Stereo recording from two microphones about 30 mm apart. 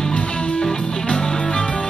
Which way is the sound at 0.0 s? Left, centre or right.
Left.